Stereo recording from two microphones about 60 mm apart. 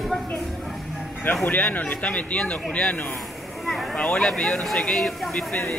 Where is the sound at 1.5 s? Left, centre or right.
Left.